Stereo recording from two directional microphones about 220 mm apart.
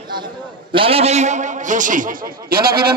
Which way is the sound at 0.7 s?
25° right (ahead or behind).